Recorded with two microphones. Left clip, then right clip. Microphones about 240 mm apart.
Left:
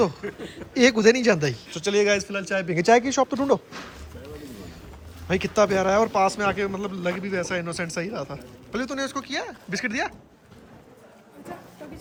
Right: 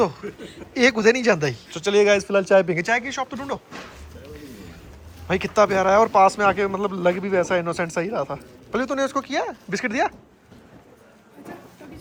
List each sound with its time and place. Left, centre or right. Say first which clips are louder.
0.0 s a man's voice: right 1 dB; centre
2.7 s speech: left 4 dB; centre
5.3 s a man's voice: right 2 dB; centre